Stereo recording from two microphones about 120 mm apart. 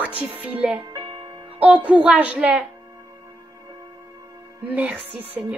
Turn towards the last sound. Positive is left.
turn(degrees=-10)  # may be behind; listen again after turning